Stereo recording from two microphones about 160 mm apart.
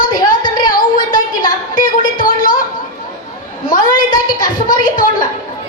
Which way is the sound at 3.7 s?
60° left (ahead or behind).